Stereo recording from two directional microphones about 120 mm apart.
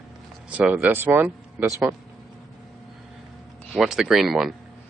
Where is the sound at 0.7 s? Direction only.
15° right (ahead or behind).